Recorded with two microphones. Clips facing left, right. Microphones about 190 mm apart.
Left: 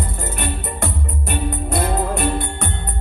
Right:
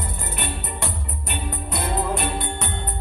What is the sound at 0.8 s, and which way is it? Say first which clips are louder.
Music: left 6 dB; 50° left (ahead or behind).